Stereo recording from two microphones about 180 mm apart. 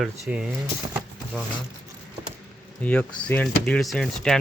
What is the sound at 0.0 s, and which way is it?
Speech, 5° right (ahead or behind).